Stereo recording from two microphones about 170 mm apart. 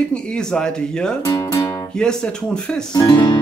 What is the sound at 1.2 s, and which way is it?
Music, 20° left (ahead or behind).